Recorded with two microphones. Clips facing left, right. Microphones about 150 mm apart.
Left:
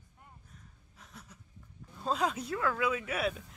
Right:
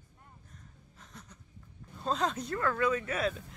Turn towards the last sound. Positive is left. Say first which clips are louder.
# right 1 dB
turn(degrees=5)  # may be behind; listen again after turning